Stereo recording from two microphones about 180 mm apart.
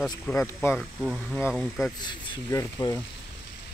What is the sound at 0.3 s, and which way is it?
Speech, 10° left (ahead or behind).